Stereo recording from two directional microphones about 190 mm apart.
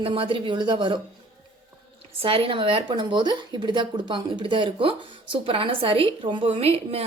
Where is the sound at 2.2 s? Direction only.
30° right (ahead or behind).